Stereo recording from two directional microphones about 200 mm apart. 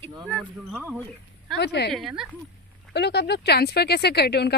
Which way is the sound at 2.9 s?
55° left (ahead or behind).